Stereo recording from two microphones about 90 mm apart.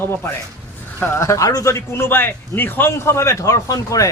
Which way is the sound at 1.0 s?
30° left (ahead or behind).